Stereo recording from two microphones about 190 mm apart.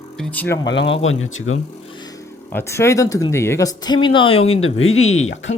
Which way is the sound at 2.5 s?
10° left (ahead or behind).